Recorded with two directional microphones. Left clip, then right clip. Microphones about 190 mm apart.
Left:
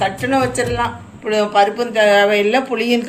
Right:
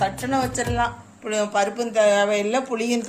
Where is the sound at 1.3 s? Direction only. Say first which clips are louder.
Left 8 dB; 55° right (ahead or behind).